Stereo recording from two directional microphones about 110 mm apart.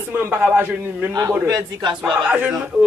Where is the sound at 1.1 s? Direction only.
35° right (ahead or behind).